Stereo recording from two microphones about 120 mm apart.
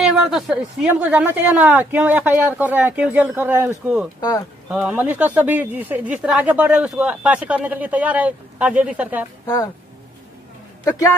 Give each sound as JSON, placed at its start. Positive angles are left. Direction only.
{"t": 0.0, "sound": "speech", "side_deg": 0}
{"t": 4.2, "sound": "speech", "side_deg": 35}
{"t": 4.6, "sound": "speech", "side_deg": -10}